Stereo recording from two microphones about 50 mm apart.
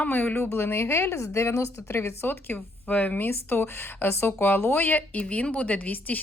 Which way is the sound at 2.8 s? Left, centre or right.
Left.